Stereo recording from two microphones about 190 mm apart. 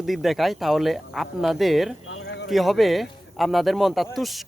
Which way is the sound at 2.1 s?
65° left (ahead or behind).